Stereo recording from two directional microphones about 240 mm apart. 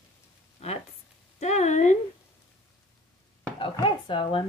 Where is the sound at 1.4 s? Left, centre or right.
Left.